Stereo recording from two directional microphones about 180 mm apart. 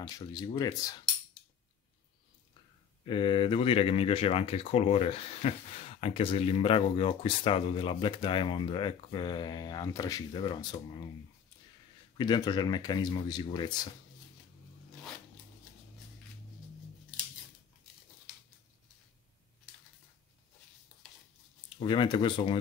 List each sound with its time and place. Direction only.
0.3 s speech: 20° left (ahead or behind)
3.1 s speech: 30° left (ahead or behind)
12.2 s speech: 25° left (ahead or behind)
21.7 s speech: 25° left (ahead or behind)